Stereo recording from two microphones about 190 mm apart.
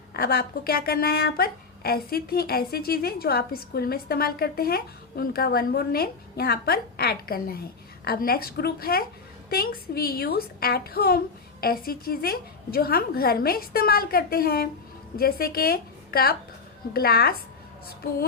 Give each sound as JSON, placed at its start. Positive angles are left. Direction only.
{"t": 0.1, "sound": "a woman's voice", "side_deg": 55}